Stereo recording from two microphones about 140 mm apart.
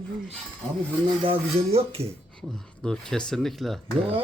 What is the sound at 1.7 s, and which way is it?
Speech, 45° right (ahead or behind).